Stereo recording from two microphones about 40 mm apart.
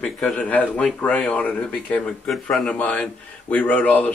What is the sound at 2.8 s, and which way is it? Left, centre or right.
Speech, left.